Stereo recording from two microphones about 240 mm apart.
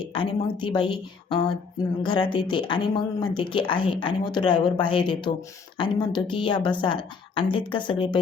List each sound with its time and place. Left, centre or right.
0.1 s speech: centre